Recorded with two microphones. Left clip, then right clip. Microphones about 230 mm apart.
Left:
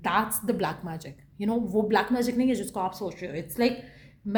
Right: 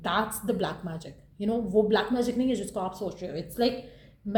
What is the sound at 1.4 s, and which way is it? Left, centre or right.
Speech, left.